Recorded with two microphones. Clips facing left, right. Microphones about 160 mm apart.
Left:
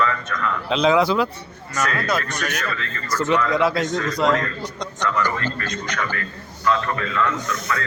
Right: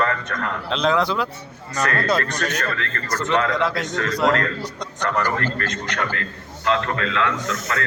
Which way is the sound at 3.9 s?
70° right (ahead or behind).